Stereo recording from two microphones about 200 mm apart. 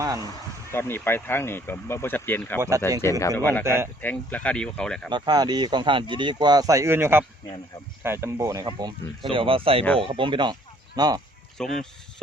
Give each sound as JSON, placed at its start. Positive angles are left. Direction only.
{"t": 0.7, "sound": "speech", "side_deg": 10}
{"t": 2.6, "sound": "speech", "side_deg": -15}
{"t": 3.0, "sound": "speech", "side_deg": 15}
{"t": 3.6, "sound": "speech", "side_deg": -15}
{"t": 4.0, "sound": "speech", "side_deg": 10}
{"t": 5.1, "sound": "speech", "side_deg": -20}
{"t": 11.5, "sound": "speech", "side_deg": 0}